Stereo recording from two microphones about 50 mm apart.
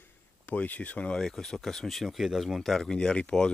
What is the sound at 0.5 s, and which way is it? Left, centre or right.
Speech, left.